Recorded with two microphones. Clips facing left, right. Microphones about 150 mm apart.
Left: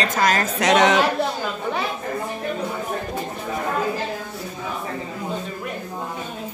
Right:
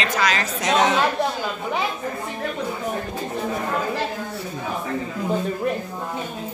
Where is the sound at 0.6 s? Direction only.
75° left (ahead or behind).